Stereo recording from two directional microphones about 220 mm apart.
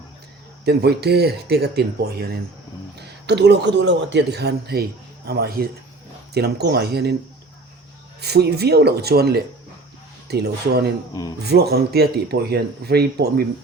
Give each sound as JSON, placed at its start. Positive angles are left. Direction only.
{"t": 0.6, "sound": "a man's voice", "side_deg": -45}
{"t": 8.2, "sound": "a man's voice", "side_deg": -50}
{"t": 11.1, "sound": "a man's voice", "side_deg": 15}
{"t": 11.4, "sound": "a man's voice", "side_deg": -45}